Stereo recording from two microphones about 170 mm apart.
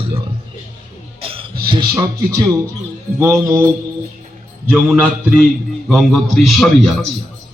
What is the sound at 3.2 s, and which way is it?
Music, 15° right (ahead or behind).